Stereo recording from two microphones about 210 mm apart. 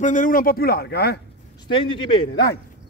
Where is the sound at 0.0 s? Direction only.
40° left (ahead or behind).